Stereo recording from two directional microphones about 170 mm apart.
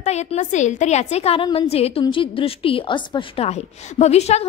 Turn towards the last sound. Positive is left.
turn(degrees=40)  # may be behind; listen again after turning